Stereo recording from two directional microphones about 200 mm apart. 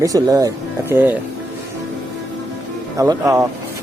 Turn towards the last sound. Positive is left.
turn(degrees=-15)  # may be behind; listen again after turning